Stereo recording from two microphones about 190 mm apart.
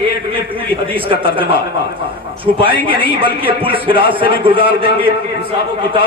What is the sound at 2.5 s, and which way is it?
A man's voice, 25° right (ahead or behind).